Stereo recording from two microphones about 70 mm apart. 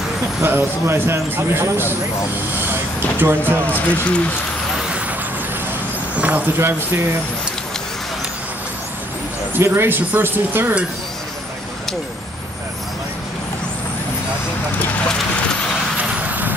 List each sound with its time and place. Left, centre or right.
0.4 s speech: right
3.2 s speech: right
3.7 s speech: centre
6.1 s speech: right
9.6 s speech: right
16.3 s vehicle: right